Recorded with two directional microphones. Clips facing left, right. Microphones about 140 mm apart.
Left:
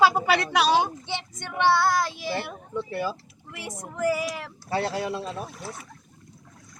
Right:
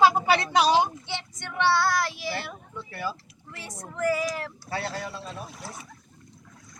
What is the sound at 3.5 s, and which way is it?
Speech, 15° left (ahead or behind).